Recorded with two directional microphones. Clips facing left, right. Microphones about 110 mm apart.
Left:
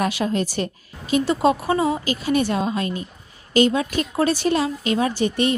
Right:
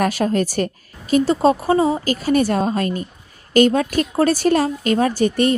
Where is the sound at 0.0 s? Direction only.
45° right (ahead or behind).